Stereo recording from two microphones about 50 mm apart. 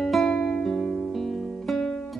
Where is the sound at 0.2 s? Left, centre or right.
Centre.